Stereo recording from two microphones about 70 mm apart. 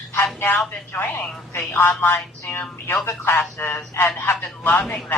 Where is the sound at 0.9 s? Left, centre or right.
Left.